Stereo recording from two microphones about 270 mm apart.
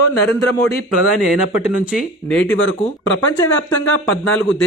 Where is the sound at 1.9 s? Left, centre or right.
Centre.